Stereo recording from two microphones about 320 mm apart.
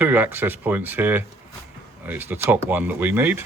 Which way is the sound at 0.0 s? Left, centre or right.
Centre.